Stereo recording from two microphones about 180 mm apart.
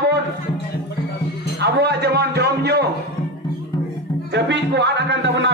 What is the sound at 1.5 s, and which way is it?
A man's voice, 70° right (ahead or behind).